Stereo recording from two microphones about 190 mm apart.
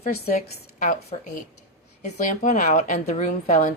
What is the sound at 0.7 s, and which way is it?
A woman's voice, 35° left (ahead or behind).